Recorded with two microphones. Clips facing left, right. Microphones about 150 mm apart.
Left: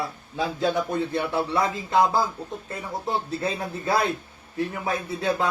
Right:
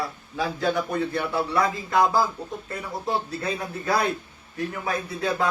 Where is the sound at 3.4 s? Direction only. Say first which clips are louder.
Left 1 dB; 25° left (ahead or behind).